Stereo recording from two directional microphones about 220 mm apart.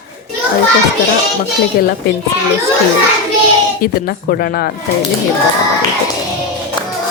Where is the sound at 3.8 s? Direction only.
45° left (ahead or behind).